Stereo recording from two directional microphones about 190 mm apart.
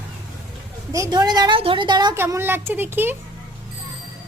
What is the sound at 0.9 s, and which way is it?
A woman's voice, 15° right (ahead or behind).